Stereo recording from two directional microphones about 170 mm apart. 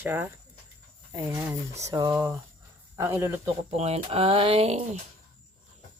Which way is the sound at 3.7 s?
40° right (ahead or behind).